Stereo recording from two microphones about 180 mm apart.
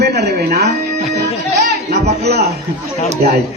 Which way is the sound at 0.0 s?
60° right (ahead or behind).